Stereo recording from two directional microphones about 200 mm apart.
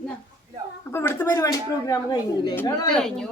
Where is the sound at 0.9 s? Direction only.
10° left (ahead or behind).